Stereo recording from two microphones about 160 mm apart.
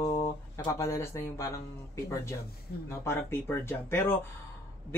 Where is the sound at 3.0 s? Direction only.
15° left (ahead or behind).